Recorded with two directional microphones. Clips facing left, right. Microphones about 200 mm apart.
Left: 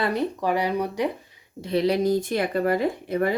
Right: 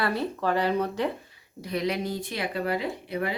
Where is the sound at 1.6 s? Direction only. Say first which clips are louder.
Left 7 dB; 30° left (ahead or behind); by 3.3 s 45° left (ahead or behind).